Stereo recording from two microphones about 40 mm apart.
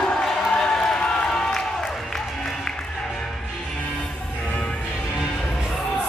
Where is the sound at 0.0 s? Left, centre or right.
Centre.